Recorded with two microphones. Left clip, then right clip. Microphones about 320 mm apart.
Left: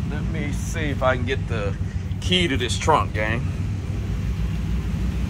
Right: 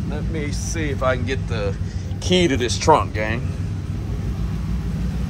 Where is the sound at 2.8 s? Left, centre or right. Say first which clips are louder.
Right 3 dB; centre.